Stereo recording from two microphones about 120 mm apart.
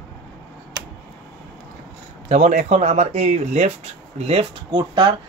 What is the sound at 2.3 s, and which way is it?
Speech, 80° right.